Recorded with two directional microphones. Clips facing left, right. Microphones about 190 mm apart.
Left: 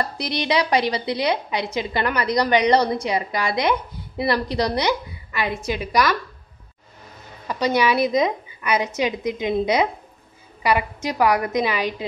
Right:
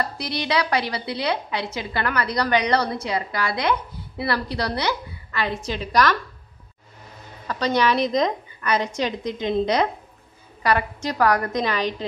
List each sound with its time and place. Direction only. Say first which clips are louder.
0.0 s a woman's voice: left 2 dB; 20° left (ahead or behind)
7.4 s a woman's voice: left 1 dB; 10° left (ahead or behind)